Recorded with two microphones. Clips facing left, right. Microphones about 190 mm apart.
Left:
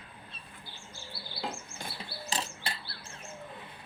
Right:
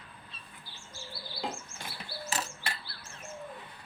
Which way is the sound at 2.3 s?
30° left (ahead or behind).